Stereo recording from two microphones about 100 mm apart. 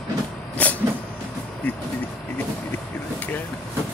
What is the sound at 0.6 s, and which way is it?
Vehicle, 15° left (ahead or behind).